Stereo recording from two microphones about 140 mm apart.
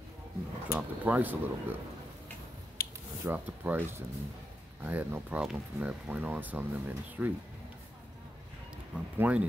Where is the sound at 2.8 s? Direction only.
90° left.